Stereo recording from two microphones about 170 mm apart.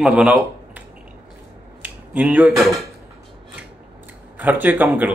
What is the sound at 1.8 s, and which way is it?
Speech, 10° right (ahead or behind).